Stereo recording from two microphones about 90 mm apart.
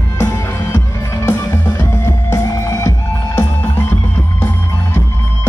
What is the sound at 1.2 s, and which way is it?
Music, 30° left (ahead or behind).